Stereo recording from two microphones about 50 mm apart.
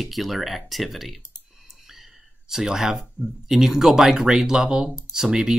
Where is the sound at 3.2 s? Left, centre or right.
Left.